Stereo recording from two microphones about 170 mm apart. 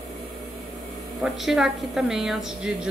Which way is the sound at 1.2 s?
Centre (ahead or behind).